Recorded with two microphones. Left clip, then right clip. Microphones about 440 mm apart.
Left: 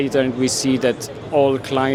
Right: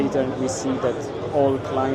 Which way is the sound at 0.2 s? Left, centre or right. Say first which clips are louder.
Left 4 dB; left.